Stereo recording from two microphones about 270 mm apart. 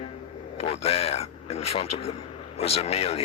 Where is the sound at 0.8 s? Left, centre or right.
Left.